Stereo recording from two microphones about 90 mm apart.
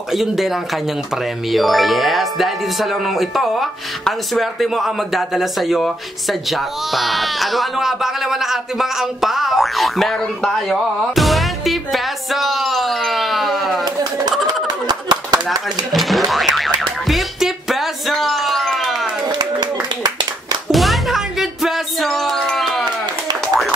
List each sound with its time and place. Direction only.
0.1 s speech: centre (ahead or behind)
14.9 s a sound: 50° right (ahead or behind)
15.9 s boing: centre (ahead or behind)
17.1 s music: 5° right (ahead or behind)
19.3 s clapping: 50° right (ahead or behind)
20.7 s music: centre (ahead or behind)